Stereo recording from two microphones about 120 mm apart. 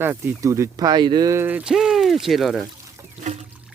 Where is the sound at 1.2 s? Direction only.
20° right (ahead or behind); by 2.6 s centre (ahead or behind).